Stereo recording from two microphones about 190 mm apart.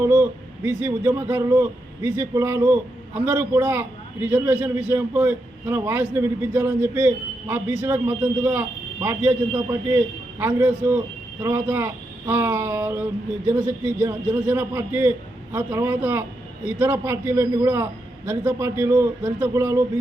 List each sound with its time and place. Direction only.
0.0 s a man's voice: 10° right (ahead or behind)
10.4 s a man's voice: 10° right (ahead or behind)